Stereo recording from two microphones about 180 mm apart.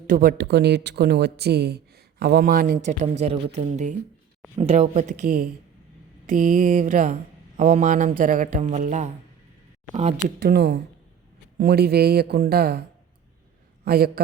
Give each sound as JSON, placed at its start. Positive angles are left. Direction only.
{"t": 0.1, "sound": "speech", "side_deg": -55}
{"t": 10.2, "sound": "speech", "side_deg": -65}
{"t": 13.8, "sound": "speech", "side_deg": -60}